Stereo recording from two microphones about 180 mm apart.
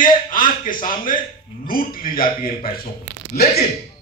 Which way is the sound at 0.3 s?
50° left (ahead or behind).